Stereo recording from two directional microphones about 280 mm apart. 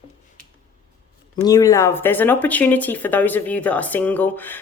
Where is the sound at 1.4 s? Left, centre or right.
Centre.